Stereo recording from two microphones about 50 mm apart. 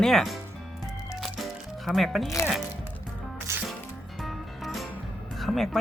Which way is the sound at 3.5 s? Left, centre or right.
Right.